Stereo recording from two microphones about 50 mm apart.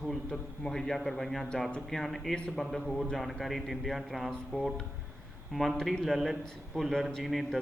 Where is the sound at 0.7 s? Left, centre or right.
Centre.